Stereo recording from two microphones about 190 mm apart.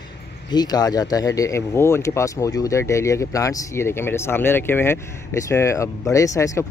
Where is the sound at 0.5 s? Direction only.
20° left (ahead or behind).